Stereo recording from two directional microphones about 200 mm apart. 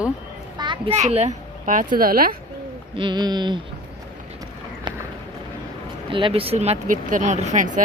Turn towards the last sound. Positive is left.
turn(degrees=-40)  # may be behind; listen again after turning